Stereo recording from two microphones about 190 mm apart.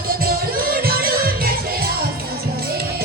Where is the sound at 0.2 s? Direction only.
50° right (ahead or behind).